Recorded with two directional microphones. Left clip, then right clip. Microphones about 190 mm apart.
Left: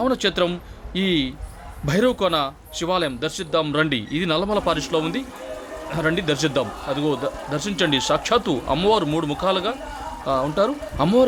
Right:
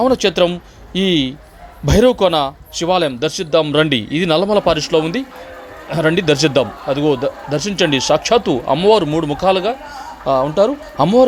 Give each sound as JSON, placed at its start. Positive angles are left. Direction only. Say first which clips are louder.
{"t": 0.0, "sound": "a man's voice", "louder": "right 7 dB", "side_deg": -20}